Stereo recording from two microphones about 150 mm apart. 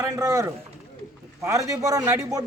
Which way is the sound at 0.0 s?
20° right (ahead or behind).